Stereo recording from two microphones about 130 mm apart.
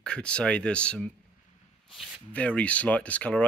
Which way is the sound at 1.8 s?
Centre (ahead or behind).